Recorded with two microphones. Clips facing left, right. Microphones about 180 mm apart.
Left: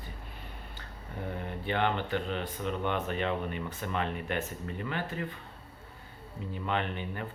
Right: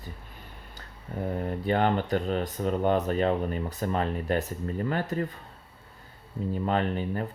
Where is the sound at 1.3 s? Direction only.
40° right (ahead or behind).